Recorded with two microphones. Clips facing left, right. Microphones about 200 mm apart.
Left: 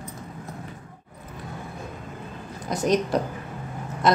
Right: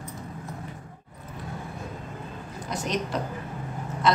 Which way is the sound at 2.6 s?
40° left (ahead or behind).